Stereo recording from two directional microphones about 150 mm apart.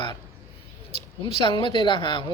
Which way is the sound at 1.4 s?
30° left (ahead or behind).